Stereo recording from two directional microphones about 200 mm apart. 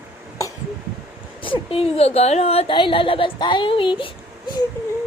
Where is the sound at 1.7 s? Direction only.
30° left (ahead or behind).